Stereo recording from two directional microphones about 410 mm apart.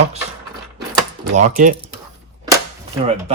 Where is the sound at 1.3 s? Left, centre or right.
Centre.